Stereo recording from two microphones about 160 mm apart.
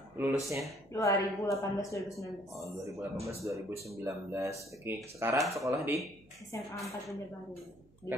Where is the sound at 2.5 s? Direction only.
20° right (ahead or behind).